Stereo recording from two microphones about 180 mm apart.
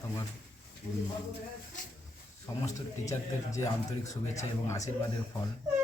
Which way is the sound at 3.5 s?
20° left (ahead or behind).